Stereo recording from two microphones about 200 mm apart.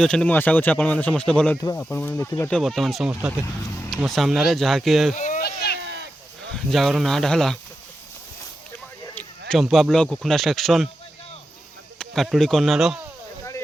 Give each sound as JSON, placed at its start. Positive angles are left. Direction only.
{"t": 0.0, "sound": "speech", "side_deg": 5}
{"t": 2.5, "sound": "speech", "side_deg": 0}
{"t": 3.4, "sound": "vehicle", "side_deg": 15}
{"t": 3.9, "sound": "speech", "side_deg": 0}
{"t": 5.1, "sound": "a sound", "side_deg": 40}
{"t": 5.4, "sound": "a sound", "side_deg": 50}
{"t": 5.8, "sound": "a sound", "side_deg": -60}
{"t": 6.5, "sound": "speech", "side_deg": 0}
{"t": 9.5, "sound": "speech", "side_deg": 0}
{"t": 11.9, "sound": "speech", "side_deg": 0}